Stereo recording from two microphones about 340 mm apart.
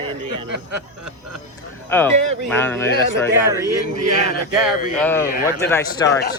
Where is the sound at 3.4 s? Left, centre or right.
Centre.